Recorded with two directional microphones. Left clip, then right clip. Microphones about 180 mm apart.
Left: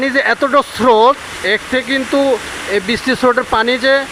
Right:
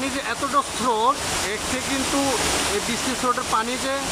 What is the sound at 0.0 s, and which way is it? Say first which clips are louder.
Speech: left 12 dB; 35° left (ahead or behind).